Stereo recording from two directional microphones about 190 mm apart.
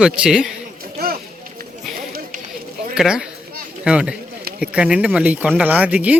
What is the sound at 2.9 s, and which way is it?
Speech, 5° right (ahead or behind).